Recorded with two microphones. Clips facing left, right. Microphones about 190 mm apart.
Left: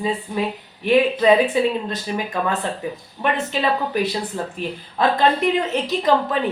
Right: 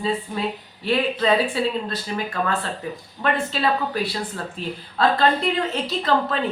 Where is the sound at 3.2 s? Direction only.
20° left (ahead or behind).